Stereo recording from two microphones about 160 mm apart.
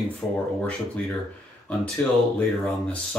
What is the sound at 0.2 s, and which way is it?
Speech, 10° left (ahead or behind).